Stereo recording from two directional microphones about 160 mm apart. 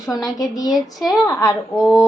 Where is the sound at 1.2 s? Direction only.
15° left (ahead or behind).